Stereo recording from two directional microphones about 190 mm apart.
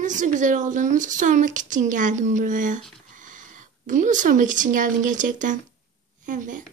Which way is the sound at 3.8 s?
40° right (ahead or behind).